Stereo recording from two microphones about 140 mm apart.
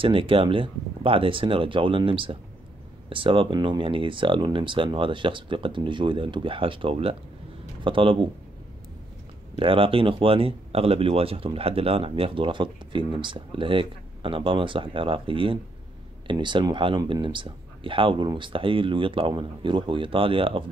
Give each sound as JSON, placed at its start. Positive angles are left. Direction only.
{"t": 0.0, "sound": "speech", "side_deg": -40}
{"t": 9.6, "sound": "speech", "side_deg": -40}